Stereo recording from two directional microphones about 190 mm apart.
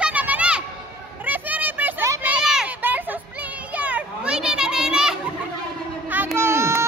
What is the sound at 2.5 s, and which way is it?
Children playing, 10° right (ahead or behind).